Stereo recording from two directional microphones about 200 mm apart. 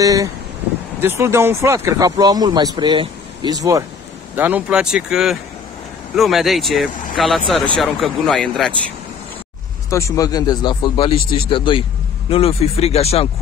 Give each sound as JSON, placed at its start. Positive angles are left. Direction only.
{"t": 0.0, "sound": "speech", "side_deg": -15}
{"t": 9.8, "sound": "a man's voice", "side_deg": 15}